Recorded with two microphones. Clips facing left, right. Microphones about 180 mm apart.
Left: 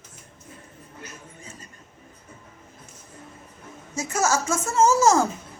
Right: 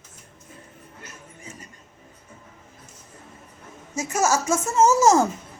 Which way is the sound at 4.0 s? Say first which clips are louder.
Right 1 dB; 15° right (ahead or behind).